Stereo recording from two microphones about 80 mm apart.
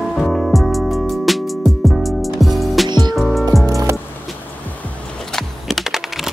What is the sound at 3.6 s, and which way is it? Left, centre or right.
Music, right.